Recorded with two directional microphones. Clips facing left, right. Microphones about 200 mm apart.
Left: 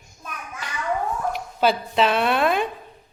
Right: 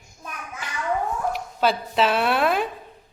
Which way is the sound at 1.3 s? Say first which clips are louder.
Left 3 dB; centre (ahead or behind).